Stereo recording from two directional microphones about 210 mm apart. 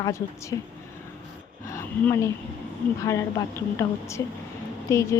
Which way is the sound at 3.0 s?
15° left (ahead or behind).